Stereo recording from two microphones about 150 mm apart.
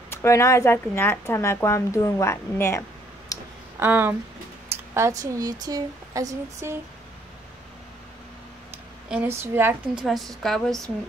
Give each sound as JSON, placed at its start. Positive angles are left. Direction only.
{"t": 0.1, "sound": "speech", "side_deg": 20}
{"t": 3.3, "sound": "a sound", "side_deg": 20}
{"t": 3.8, "sound": "a woman's voice", "side_deg": -15}
{"t": 9.3, "sound": "a woman's voice", "side_deg": -15}
{"t": 9.9, "sound": "a woman's voice", "side_deg": 0}